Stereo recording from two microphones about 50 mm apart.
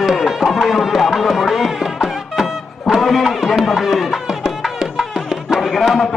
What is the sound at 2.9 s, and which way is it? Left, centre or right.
Music, centre.